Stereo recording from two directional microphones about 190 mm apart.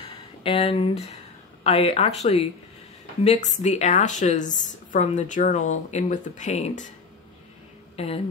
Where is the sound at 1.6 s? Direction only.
30° left (ahead or behind).